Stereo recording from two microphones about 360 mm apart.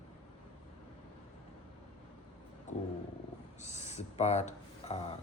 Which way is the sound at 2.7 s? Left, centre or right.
Centre.